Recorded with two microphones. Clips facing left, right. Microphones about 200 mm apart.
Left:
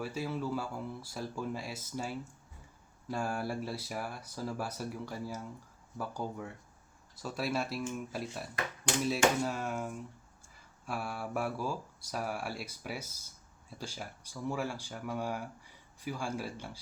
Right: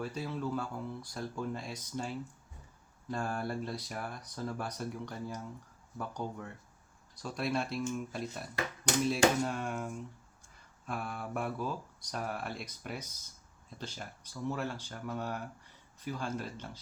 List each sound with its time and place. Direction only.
0.0 s speech: 5° left (ahead or behind)